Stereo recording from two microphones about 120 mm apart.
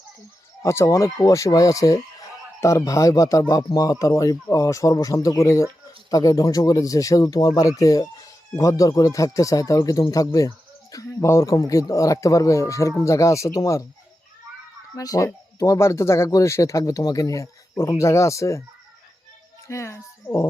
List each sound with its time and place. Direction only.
0.6 s speech: 25° left (ahead or behind)
14.9 s speech: 30° left (ahead or behind)
19.6 s speech: 25° left (ahead or behind)